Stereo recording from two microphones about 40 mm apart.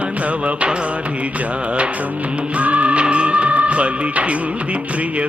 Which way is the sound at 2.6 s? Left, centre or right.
Right.